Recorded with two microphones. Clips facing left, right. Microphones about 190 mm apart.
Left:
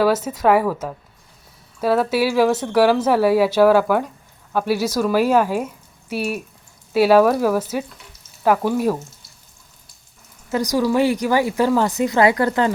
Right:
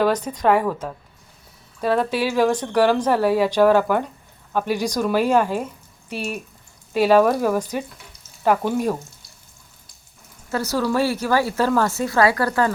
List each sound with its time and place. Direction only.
0.0 s speech: 5° left (ahead or behind)
10.5 s speech: 15° left (ahead or behind)